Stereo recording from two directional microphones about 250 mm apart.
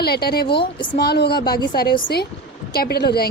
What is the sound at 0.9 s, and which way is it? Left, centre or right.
A woman's voice, left.